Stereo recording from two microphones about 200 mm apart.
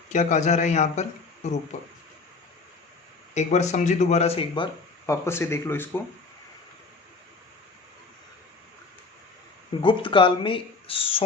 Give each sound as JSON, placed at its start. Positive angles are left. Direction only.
{"t": 0.1, "sound": "speech", "side_deg": 35}
{"t": 3.3, "sound": "speech", "side_deg": 35}
{"t": 5.2, "sound": "speech", "side_deg": 15}
{"t": 9.8, "sound": "speech", "side_deg": 25}